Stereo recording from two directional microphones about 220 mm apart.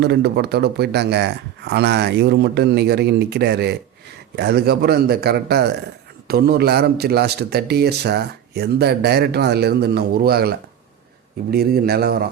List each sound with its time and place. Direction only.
0.0 s a man's voice: 50° right (ahead or behind)
11.5 s a man's voice: 45° right (ahead or behind)